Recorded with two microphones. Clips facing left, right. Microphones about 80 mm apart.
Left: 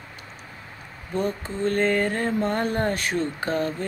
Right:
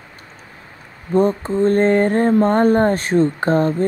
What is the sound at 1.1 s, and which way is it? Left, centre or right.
Mantra, right.